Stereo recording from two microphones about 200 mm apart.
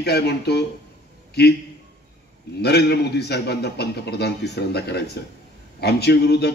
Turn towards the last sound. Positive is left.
turn(degrees=55)  # may be behind; listen again after turning